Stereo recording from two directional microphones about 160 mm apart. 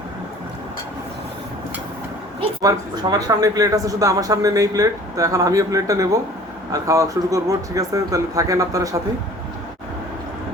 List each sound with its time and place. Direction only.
2.6 s speech: 25° right (ahead or behind)